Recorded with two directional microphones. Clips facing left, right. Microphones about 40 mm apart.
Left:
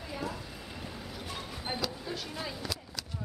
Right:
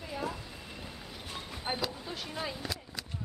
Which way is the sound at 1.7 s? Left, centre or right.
Centre.